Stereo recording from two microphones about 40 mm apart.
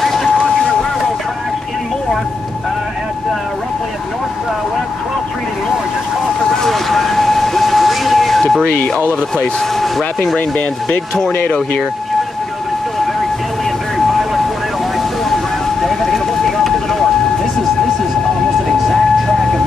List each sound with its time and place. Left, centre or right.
0.0 s vehicle: centre
0.4 s vehicle: centre
6.6 s vehicle: centre
9.8 s speech: centre
13.9 s vehicle: centre
15.8 s vehicle: centre